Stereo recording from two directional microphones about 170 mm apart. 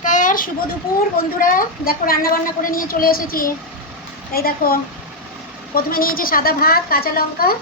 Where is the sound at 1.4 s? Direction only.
55° left (ahead or behind).